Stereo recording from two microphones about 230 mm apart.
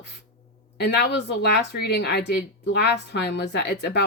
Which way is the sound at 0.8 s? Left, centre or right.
Left.